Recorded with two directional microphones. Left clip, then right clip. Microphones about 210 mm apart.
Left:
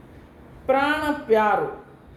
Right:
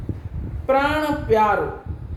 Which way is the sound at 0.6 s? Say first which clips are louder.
Right 2 dB; 5° left (ahead or behind).